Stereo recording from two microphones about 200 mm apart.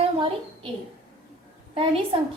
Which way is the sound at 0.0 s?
25° right (ahead or behind).